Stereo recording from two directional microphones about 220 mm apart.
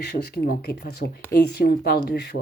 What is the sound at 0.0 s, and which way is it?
A woman's voice, 45° left (ahead or behind).